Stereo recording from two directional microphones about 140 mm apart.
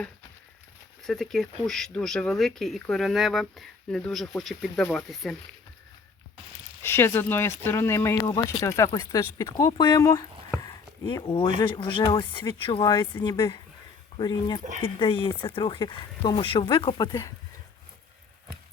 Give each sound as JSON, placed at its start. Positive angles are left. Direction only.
{"t": 1.0, "sound": "speech", "side_deg": 0}
{"t": 6.8, "sound": "speech", "side_deg": 15}